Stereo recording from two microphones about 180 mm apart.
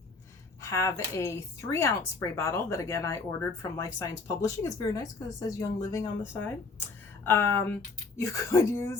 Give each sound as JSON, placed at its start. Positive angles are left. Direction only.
{"t": 0.6, "sound": "speech", "side_deg": 15}